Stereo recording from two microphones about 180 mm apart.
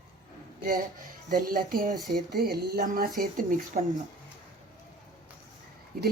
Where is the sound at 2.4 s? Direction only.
60° right (ahead or behind).